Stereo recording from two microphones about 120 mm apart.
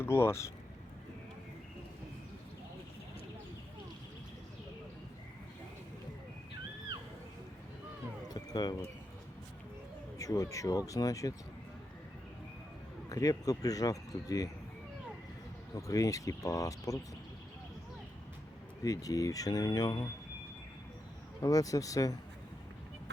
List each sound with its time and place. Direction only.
0.0 s speech: 20° left (ahead or behind)
8.3 s speech: 35° left (ahead or behind)
10.2 s speech: 30° left (ahead or behind)
13.1 s speech: 30° left (ahead or behind)
15.9 s speech: 30° left (ahead or behind)
18.8 s speech: 30° left (ahead or behind)
21.4 s speech: 30° left (ahead or behind)